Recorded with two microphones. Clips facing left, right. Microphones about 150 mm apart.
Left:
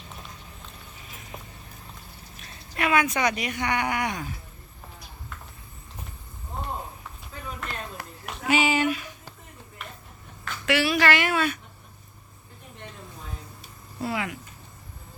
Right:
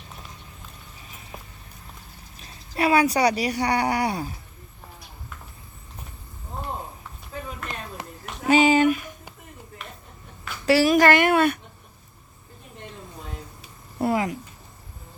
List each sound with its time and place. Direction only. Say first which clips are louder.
2.4 s speech: right 5 dB; 35° right (ahead or behind)
8.0 s a sound: right 3 dB; 20° right (ahead or behind)
8.4 s speech: right 6 dB; 45° right (ahead or behind)
10.7 s speech: right 6 dB; 40° right (ahead or behind)
14.0 s speech: right 6 dB; 40° right (ahead or behind)